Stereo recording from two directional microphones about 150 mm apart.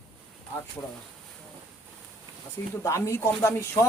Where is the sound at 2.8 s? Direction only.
20° left (ahead or behind).